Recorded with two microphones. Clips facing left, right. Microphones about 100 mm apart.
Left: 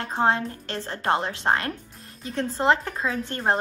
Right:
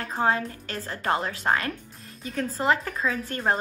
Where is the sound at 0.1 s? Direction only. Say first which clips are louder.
Left 2 dB; 30° left (ahead or behind).